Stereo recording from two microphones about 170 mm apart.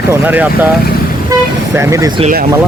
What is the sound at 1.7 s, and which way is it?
Speech, 15° right (ahead or behind).